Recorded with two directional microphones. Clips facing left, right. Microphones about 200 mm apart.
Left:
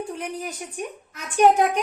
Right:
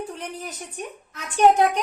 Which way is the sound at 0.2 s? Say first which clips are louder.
Left 3 dB; 10° left (ahead or behind).